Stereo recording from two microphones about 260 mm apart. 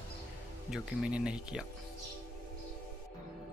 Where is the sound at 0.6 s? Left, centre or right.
Centre.